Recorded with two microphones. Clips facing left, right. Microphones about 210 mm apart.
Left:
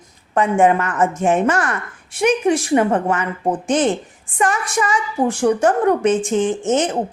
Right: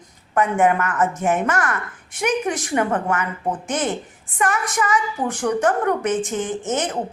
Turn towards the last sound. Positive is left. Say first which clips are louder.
# left 6 dB
turn(degrees=15)  # may be behind; listen again after turning